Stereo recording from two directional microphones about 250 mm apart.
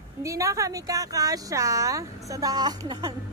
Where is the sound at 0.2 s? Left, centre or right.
Centre.